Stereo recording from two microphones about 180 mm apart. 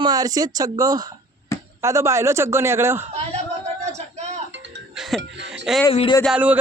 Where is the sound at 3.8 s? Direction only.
40° right (ahead or behind).